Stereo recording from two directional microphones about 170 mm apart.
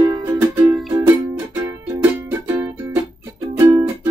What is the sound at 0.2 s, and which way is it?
Music, 15° right (ahead or behind).